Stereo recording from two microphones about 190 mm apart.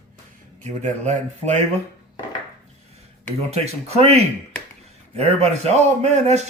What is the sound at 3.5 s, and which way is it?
A man's voice, 35° right (ahead or behind).